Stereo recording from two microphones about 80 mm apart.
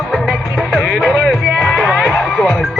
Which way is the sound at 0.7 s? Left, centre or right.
Centre.